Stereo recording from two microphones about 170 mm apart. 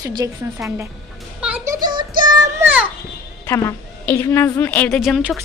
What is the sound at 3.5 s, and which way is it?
A woman's voice, 15° left (ahead or behind).